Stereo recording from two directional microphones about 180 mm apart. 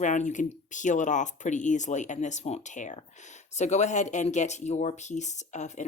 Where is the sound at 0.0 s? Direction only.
45° left (ahead or behind).